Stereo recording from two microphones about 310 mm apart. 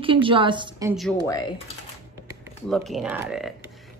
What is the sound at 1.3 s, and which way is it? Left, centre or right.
Speech, centre.